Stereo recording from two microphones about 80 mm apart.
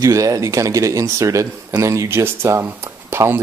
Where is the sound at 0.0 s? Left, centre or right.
Right.